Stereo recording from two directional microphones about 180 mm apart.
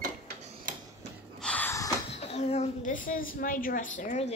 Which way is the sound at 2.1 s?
35° left (ahead or behind).